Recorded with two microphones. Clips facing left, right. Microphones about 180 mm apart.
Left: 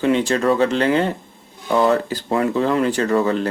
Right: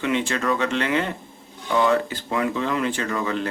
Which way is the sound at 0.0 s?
35° left (ahead or behind).